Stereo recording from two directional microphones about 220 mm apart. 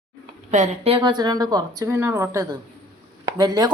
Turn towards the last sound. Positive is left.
turn(degrees=-20)  # may be behind; listen again after turning